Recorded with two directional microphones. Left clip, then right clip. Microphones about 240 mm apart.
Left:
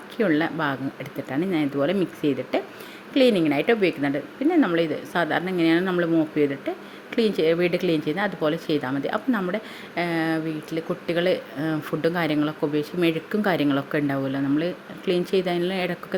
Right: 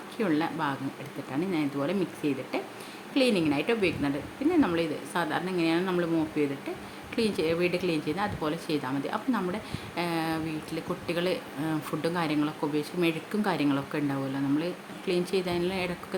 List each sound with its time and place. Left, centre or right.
0.2 s speech: centre